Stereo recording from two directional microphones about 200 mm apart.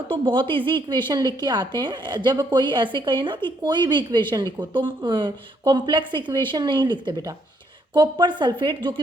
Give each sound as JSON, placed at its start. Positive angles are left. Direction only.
{"t": 0.1, "sound": "a woman's voice", "side_deg": -25}